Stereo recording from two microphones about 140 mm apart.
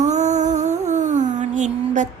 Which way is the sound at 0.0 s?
55° right (ahead or behind).